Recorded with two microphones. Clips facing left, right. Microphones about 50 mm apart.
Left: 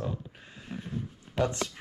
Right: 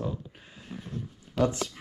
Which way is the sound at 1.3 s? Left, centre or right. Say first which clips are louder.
Right 2 dB; centre.